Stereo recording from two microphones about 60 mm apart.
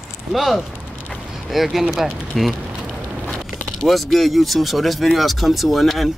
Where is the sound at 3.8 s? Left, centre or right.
Centre.